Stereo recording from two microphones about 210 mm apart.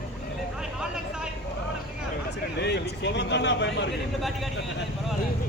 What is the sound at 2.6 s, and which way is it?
Speech, 55° left (ahead or behind).